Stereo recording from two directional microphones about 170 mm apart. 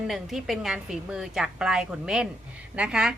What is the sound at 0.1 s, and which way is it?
A woman's voice, centre (ahead or behind).